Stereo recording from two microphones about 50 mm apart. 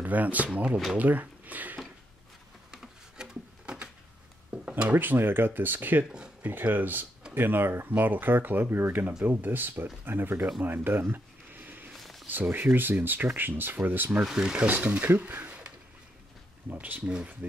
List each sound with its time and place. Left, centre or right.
0.0 s speech: right
2.7 s a sound: centre
4.9 s speech: right
10.6 s a sound: right
12.0 s a sound: centre
12.3 s speech: right
14.2 s rub: centre
14.7 s speech: right
16.6 s speech: right